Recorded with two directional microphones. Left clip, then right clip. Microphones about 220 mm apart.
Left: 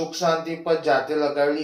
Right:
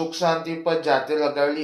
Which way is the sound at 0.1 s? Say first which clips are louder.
Even; 50° right (ahead or behind).